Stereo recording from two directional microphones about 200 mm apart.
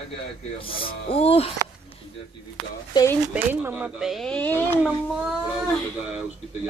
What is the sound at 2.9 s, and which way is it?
Speech, 15° left (ahead or behind).